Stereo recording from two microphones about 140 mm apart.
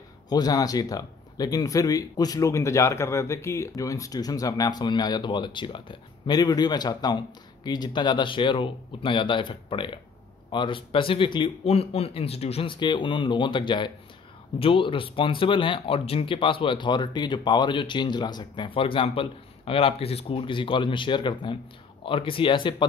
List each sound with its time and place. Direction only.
0.3 s speech: 25° left (ahead or behind)